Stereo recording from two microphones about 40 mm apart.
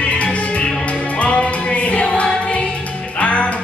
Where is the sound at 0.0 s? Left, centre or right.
Left.